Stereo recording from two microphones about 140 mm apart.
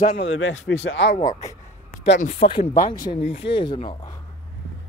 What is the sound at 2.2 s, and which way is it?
Speech, 50° left (ahead or behind).